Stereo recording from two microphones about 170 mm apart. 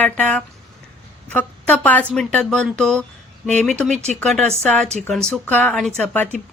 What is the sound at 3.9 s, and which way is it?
Speech, 45° right (ahead or behind).